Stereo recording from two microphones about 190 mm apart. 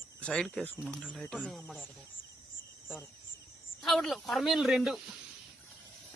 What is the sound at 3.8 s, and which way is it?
Speech, centre (ahead or behind).